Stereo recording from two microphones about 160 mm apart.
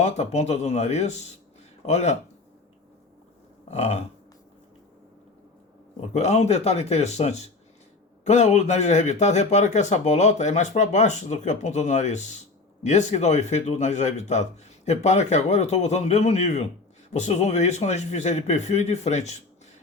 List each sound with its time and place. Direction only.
0.0 s a man's voice: 45° left (ahead or behind)
3.7 s a man's voice: 45° left (ahead or behind)
6.0 s a man's voice: 40° left (ahead or behind)